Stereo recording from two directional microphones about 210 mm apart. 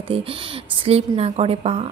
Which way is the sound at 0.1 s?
25° right (ahead or behind).